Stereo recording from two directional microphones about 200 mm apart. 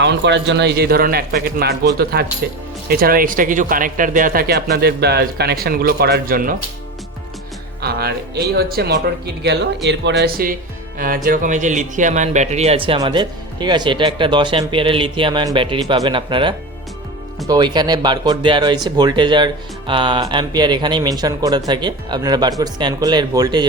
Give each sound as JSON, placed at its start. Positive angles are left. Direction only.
{"t": 0.0, "sound": "speech", "side_deg": -60}
{"t": 7.8, "sound": "speech", "side_deg": -55}